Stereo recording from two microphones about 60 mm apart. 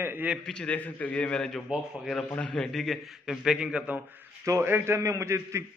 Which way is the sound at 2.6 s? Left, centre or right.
Centre.